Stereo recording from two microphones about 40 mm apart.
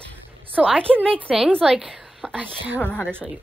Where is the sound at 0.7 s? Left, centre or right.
Left.